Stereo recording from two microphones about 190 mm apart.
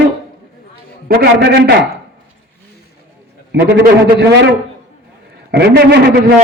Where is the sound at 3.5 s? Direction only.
60° right (ahead or behind).